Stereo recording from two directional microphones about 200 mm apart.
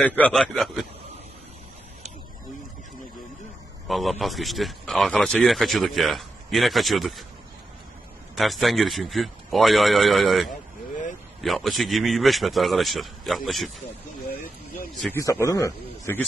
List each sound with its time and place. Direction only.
0.0 s a man's voice: 5° left (ahead or behind)
3.8 s a man's voice: centre (ahead or behind)
8.4 s a man's voice: centre (ahead or behind)
15.4 s a man's voice: 15° left (ahead or behind)